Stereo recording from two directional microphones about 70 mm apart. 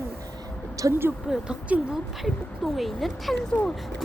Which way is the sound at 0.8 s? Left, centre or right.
Right.